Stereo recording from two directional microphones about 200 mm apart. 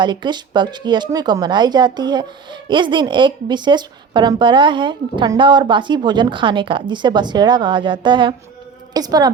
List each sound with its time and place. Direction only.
0.0 s a woman's voice: 20° right (ahead or behind)